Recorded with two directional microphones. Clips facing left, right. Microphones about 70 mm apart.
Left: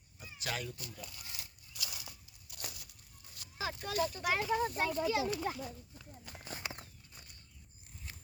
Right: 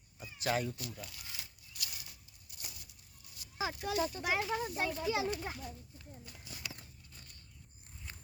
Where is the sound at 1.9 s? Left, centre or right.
Left.